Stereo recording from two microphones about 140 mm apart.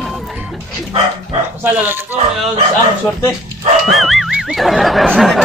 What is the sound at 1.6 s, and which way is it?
Speech, 15° right (ahead or behind).